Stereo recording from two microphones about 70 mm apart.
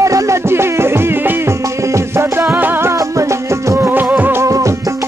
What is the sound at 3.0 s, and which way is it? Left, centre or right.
Music, right.